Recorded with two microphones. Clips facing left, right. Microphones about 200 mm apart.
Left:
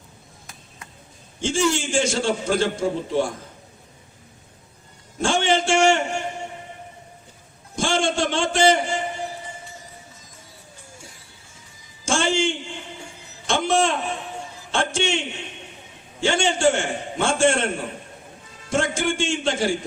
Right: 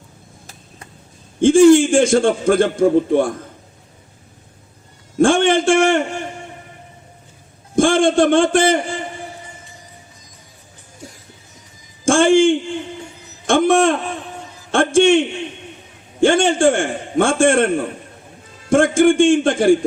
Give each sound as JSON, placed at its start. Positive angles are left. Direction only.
{"t": 1.4, "sound": "a man's voice", "side_deg": -55}
{"t": 5.2, "sound": "a man's voice", "side_deg": -55}
{"t": 7.8, "sound": "a man's voice", "side_deg": -55}
{"t": 12.0, "sound": "a sound", "side_deg": -55}
{"t": 16.2, "sound": "a man's voice", "side_deg": -55}
{"t": 18.7, "sound": "a man's voice", "side_deg": -55}